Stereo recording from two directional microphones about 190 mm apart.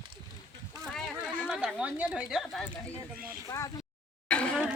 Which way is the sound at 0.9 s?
Centre (ahead or behind).